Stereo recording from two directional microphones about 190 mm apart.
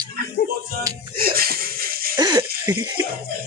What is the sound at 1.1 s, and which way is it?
Music, 50° right (ahead or behind).